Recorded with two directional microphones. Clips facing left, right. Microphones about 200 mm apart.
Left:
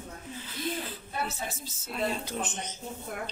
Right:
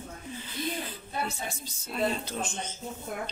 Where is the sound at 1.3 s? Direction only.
5° left (ahead or behind).